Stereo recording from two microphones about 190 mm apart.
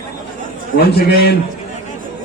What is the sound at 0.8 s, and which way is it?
Speech, 55° left (ahead or behind).